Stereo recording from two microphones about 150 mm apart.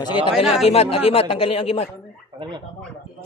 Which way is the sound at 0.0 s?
30° left (ahead or behind).